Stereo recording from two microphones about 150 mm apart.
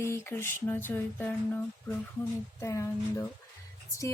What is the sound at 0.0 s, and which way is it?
Speech, 15° left (ahead or behind).